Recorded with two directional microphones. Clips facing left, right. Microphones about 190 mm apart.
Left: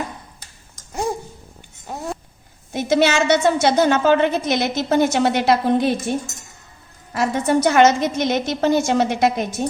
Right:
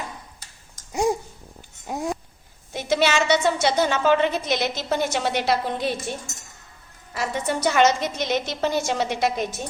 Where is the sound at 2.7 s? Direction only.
50° left (ahead or behind).